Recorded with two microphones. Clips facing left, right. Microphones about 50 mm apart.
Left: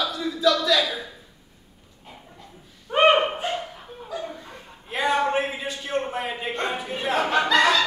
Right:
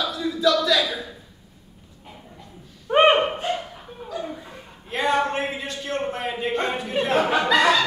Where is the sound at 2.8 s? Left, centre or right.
Right.